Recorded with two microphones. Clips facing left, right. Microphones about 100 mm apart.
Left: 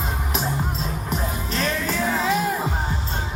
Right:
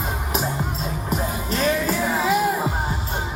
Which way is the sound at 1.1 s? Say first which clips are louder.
Right 3 dB; 5° right (ahead or behind).